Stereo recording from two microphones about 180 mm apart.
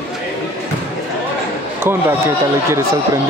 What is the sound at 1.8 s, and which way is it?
Speech, 15° right (ahead or behind).